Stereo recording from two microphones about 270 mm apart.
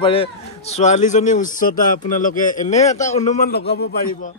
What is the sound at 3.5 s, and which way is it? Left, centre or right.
Speech, left.